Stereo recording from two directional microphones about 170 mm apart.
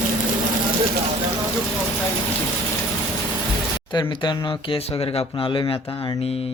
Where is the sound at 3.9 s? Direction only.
30° left (ahead or behind).